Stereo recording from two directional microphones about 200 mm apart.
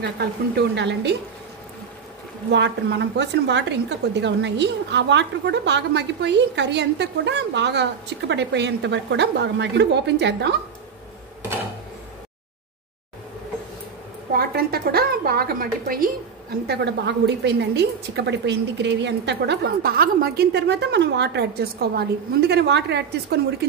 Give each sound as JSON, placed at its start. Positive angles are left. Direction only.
{"t": 0.0, "sound": "a woman's voice", "side_deg": -55}
{"t": 2.5, "sound": "a woman's voice", "side_deg": -60}
{"t": 14.3, "sound": "a sound", "side_deg": -50}
{"t": 16.6, "sound": "a woman's voice", "side_deg": -55}